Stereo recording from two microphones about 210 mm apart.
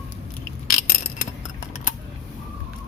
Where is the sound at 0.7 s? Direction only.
45° left (ahead or behind).